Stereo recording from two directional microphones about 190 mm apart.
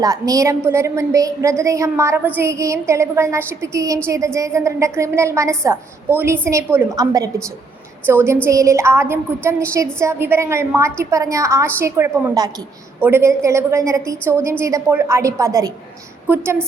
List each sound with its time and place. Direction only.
0.0 s a woman's voice: 20° right (ahead or behind)